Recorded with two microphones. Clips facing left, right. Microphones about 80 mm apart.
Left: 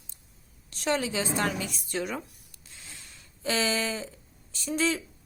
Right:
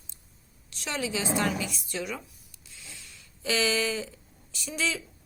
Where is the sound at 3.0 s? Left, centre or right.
Left.